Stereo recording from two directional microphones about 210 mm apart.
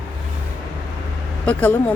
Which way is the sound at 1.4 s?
5° left (ahead or behind).